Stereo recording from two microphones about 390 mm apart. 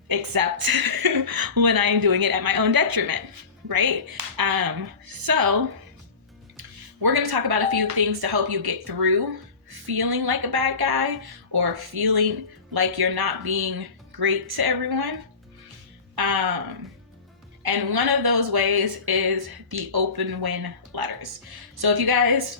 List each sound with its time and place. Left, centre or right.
0.1 s a woman's voice: right
6.6 s speech: right
16.1 s speech: right
17.6 s speech: right